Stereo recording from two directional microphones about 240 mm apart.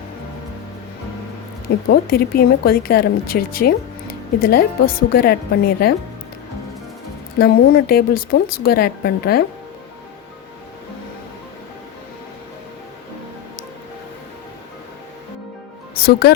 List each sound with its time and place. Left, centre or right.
1.9 s a woman's voice: left
7.3 s a woman's voice: left
16.2 s a woman's voice: left